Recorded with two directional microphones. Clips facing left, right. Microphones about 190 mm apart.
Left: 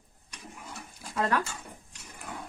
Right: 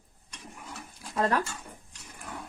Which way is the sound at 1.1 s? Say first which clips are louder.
Right 1 dB; 35° right (ahead or behind).